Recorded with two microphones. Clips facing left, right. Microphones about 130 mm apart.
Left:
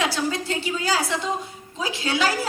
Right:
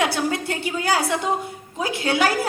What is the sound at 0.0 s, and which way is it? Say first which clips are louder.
A woman's voice: right 2 dB; 55° right (ahead or behind).